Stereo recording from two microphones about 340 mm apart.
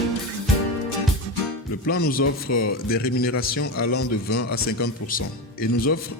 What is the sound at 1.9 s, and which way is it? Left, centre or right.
Speech, left.